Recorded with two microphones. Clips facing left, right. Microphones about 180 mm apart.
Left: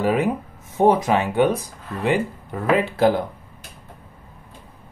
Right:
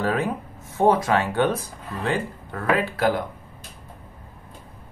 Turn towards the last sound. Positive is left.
turn(degrees=25)  # may be behind; listen again after turning